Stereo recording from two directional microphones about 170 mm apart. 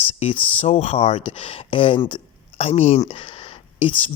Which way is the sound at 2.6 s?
40° left (ahead or behind).